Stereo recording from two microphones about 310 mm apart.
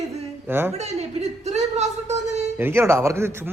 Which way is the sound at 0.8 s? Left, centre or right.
Right.